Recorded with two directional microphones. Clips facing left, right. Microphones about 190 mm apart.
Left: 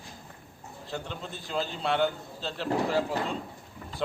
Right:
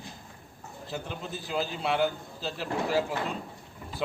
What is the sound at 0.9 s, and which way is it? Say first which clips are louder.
A man's voice: right 1 dB; 5° right (ahead or behind).